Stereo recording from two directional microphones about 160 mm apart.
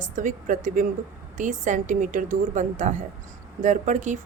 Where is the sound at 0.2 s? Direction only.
55° right (ahead or behind).